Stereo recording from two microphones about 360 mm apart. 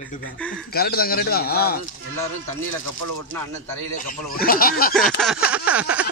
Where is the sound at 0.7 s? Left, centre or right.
Left.